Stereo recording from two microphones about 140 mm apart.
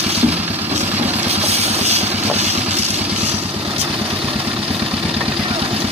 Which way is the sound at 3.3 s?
15° right (ahead or behind).